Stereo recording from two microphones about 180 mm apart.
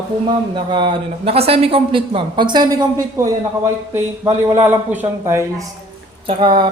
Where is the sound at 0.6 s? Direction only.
25° right (ahead or behind).